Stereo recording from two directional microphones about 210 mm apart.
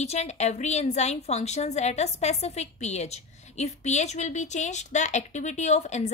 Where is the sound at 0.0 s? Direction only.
30° left (ahead or behind).